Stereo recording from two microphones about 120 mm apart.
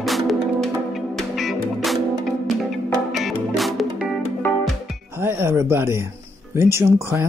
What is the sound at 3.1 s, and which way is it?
Music, centre (ahead or behind).